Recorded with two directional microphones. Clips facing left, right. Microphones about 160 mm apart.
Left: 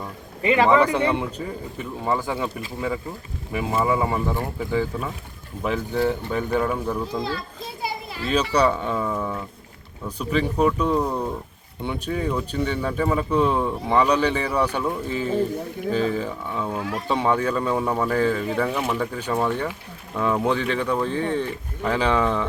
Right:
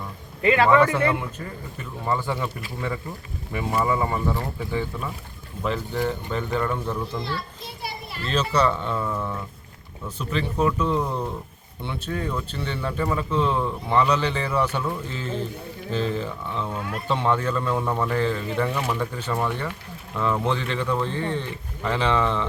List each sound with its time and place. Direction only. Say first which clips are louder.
0.4 s speech: even; 15° left (ahead or behind)